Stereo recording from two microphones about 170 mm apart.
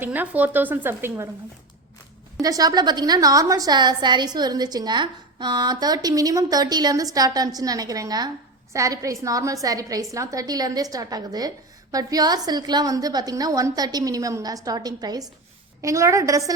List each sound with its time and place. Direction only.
0.0 s speech: 10° right (ahead or behind)
2.4 s a woman's voice: 20° right (ahead or behind)